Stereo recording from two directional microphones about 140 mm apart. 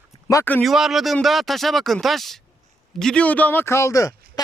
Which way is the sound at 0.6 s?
Centre (ahead or behind).